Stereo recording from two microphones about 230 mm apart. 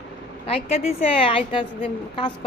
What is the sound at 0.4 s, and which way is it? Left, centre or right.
A woman's voice, left.